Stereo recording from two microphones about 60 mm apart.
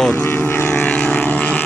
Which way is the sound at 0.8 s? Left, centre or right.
Left.